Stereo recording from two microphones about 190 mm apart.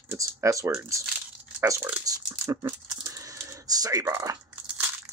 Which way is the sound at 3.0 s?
15° right (ahead or behind).